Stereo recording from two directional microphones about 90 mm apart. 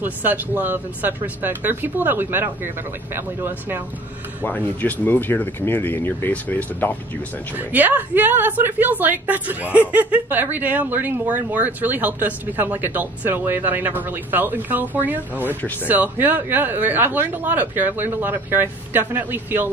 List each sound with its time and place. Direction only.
0.0 s a woman's voice: 20° right (ahead or behind)
4.4 s speech: 20° left (ahead or behind)
7.5 s a woman's voice: 20° right (ahead or behind)